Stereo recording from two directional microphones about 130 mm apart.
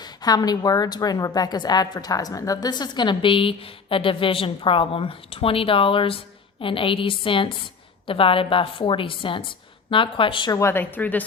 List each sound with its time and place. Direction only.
0.0 s a woman's voice: 30° left (ahead or behind)
10.6 s a woman's voice: 20° left (ahead or behind)